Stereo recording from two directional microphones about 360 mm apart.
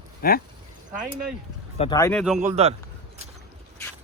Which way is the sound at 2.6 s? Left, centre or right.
Centre.